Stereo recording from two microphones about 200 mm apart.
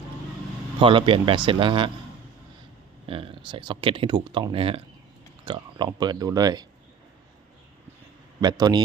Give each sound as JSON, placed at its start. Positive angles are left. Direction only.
{"t": 0.8, "sound": "speech", "side_deg": -25}
{"t": 3.1, "sound": "speech", "side_deg": -25}
{"t": 8.4, "sound": "speech", "side_deg": -20}